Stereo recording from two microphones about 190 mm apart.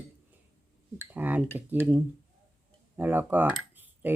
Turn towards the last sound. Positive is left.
turn(degrees=-10)  # may be behind; listen again after turning